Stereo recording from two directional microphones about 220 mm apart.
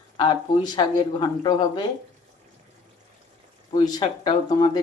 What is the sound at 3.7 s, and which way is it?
Speech, 20° left (ahead or behind).